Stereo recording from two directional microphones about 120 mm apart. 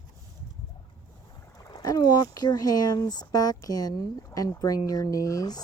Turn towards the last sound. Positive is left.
turn(degrees=30)  # may be behind; listen again after turning